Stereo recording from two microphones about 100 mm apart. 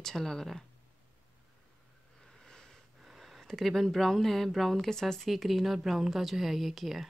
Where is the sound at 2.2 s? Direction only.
5° left (ahead or behind).